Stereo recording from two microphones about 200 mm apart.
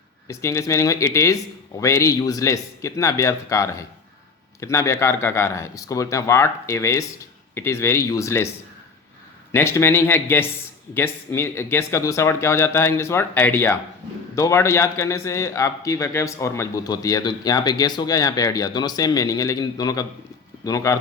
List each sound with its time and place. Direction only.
0.3 s a man's voice: 15° left (ahead or behind)
9.5 s a man's voice: 10° left (ahead or behind)